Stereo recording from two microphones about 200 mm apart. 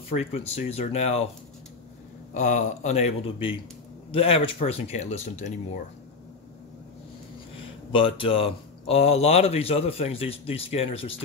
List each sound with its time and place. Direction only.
0.1 s speech: 30° left (ahead or behind)
2.3 s speech: 35° left (ahead or behind)
7.9 s speech: 25° left (ahead or behind)